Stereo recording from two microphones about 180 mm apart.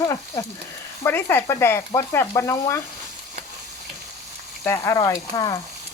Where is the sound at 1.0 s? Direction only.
10° left (ahead or behind).